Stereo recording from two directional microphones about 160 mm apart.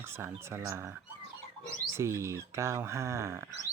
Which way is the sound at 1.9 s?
15° right (ahead or behind).